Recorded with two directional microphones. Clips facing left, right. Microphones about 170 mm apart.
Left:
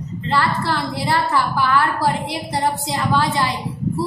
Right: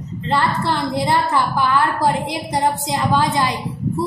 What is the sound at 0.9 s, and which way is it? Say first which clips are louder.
A woman's voice: right 2 dB; 20° right (ahead or behind).